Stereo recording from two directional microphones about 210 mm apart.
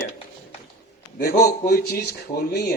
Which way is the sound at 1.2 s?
45° left (ahead or behind).